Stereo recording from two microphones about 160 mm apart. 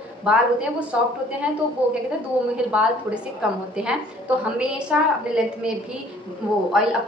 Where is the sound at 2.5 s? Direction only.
5° right (ahead or behind).